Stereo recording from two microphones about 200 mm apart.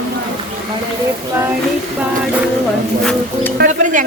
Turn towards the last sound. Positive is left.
turn(degrees=-40)  # may be behind; listen again after turning